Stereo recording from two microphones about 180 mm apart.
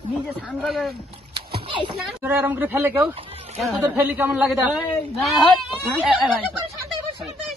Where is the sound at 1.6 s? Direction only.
25° right (ahead or behind).